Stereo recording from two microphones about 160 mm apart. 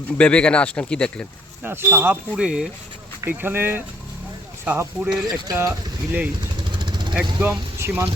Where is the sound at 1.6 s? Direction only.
15° right (ahead or behind).